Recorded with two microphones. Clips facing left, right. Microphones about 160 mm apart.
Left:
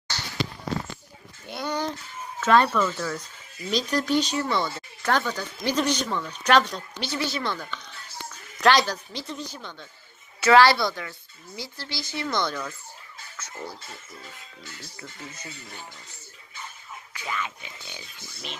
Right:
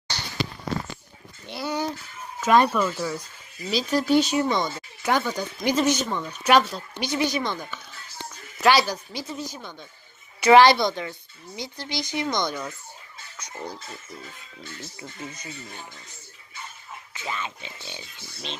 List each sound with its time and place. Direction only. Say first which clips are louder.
1.5 s speech: right 1 dB; 5° right (ahead or behind)
14.8 s speech: right 4 dB; 20° right (ahead or behind)
17.2 s speech: even; 25° right (ahead or behind)